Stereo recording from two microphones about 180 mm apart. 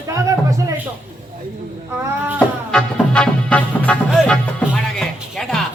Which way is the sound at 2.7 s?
5° left (ahead or behind).